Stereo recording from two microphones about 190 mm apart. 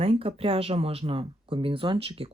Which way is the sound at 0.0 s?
30° right (ahead or behind).